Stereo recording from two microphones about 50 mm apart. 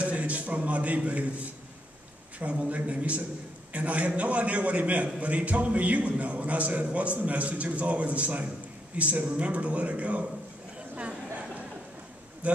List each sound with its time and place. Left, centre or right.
0.0 s a sound: right
2.3 s a man's voice: right
12.4 s speech: right